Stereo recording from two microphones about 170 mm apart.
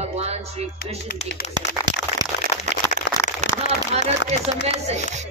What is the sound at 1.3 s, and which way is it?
Speech, 90° left.